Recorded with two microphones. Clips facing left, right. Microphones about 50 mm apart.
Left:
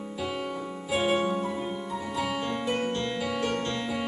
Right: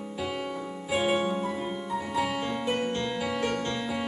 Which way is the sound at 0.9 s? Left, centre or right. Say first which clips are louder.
Even; centre.